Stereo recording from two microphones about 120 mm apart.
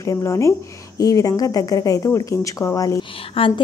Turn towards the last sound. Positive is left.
turn(degrees=45)  # may be behind; listen again after turning